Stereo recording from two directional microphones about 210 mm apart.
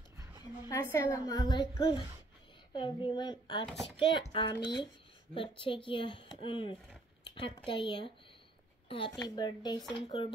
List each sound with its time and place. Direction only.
0.7 s a child's voice: 15° left (ahead or behind)